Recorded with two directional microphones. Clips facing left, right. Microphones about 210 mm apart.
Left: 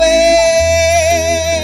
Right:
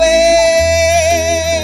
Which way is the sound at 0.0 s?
Centre (ahead or behind).